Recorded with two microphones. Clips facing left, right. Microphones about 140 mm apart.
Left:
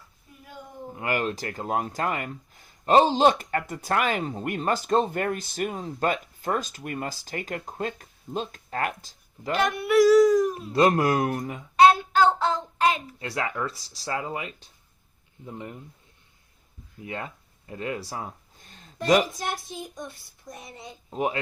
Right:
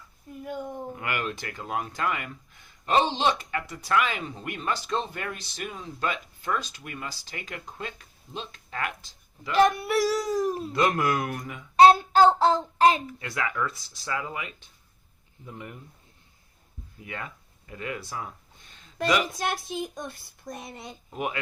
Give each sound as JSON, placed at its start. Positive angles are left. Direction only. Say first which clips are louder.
{"t": 0.9, "sound": "speech", "louder": "left 7 dB", "side_deg": 35}
{"t": 9.6, "sound": "speech", "louder": "left 1 dB", "side_deg": -35}
{"t": 10.7, "sound": "speech", "louder": "left 6 dB", "side_deg": 35}
{"t": 11.8, "sound": "child singing", "louder": "right 2 dB", "side_deg": -35}
{"t": 13.1, "sound": "speech", "louder": "left 1 dB", "side_deg": 30}
{"t": 17.1, "sound": "a sound", "louder": "left 3 dB", "side_deg": 30}
{"t": 19.4, "sound": "a child's voice", "louder": "right 3 dB", "side_deg": -85}
{"t": 20.5, "sound": "speech", "louder": "right 3 dB", "side_deg": -70}
{"t": 21.1, "sound": "speech", "louder": "left 4 dB", "side_deg": 30}